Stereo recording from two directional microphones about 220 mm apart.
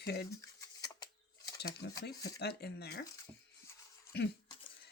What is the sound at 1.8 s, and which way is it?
Speech, 50° left (ahead or behind).